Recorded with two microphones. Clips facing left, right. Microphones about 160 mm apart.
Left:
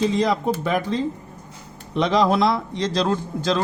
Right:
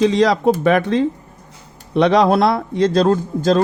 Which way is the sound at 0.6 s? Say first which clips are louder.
Right 7 dB; 70° right (ahead or behind).